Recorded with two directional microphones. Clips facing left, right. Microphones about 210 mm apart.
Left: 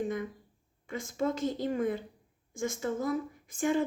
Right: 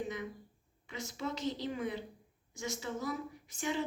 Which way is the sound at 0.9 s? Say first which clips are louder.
Left 8 dB; 50° left (ahead or behind).